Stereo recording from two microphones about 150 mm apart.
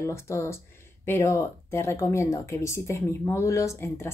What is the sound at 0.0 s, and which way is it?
Speech, 20° left (ahead or behind).